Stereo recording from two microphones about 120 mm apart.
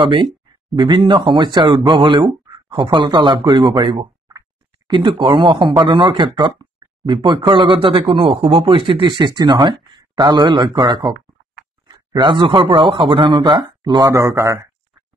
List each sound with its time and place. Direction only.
0.0 s speech: 45° right (ahead or behind)
4.3 s a sound: 35° right (ahead or behind)
5.2 s speech: 45° right (ahead or behind); by 14.7 s 25° right (ahead or behind)